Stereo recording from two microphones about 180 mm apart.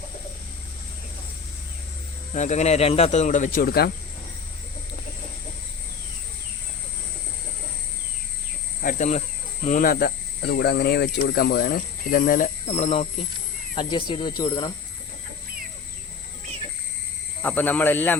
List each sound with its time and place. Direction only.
2.3 s speech: 40° left (ahead or behind); by 3.9 s 60° left (ahead or behind)
8.8 s speech: 45° left (ahead or behind)
13.7 s speech: 25° left (ahead or behind)
17.4 s speech: 10° left (ahead or behind)